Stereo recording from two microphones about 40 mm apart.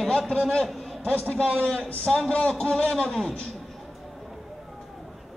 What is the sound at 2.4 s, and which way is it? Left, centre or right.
Speech, centre.